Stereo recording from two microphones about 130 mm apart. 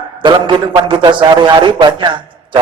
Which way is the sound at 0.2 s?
40° right (ahead or behind).